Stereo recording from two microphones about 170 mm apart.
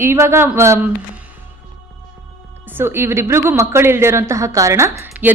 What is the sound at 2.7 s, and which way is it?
A woman's voice, 15° right (ahead or behind).